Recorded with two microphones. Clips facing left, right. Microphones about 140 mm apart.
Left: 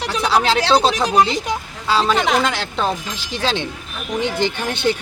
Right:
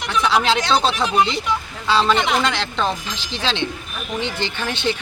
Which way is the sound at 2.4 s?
10° left (ahead or behind).